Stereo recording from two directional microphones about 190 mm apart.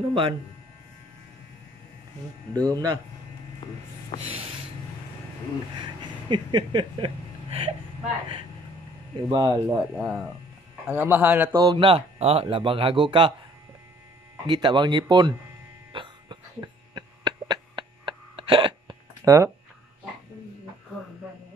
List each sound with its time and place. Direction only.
0.1 s speech: 30° right (ahead or behind)
2.5 s speech: 20° right (ahead or behind)
3.6 s a sound: 25° left (ahead or behind)
4.3 s snort: 30° right (ahead or behind)
5.8 s a sound: 25° right (ahead or behind)
9.3 s a man's voice: 20° right (ahead or behind)
11.5 s speech: 25° right (ahead or behind)
14.4 s speech: 25° right (ahead or behind)
15.9 s hiccup: 25° right (ahead or behind)